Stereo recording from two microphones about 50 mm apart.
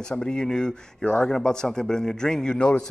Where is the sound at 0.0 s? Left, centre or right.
Centre.